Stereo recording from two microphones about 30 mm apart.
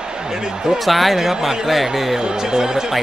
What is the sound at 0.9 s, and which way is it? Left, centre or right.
Speech, centre.